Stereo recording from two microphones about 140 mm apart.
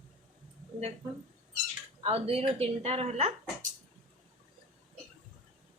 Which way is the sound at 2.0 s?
45° right (ahead or behind).